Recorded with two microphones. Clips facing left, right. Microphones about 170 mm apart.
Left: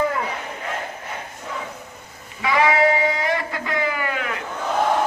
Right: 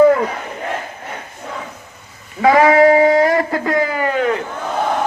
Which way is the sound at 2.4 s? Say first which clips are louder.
Right 8 dB; 50° right (ahead or behind).